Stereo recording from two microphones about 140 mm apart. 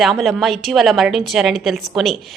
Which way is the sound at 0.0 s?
Centre (ahead or behind).